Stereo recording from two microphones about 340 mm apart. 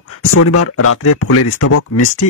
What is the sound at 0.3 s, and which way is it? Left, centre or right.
Speech, left.